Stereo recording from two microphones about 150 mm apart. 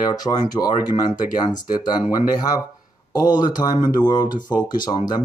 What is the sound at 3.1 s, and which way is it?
Speech, 25° left (ahead or behind).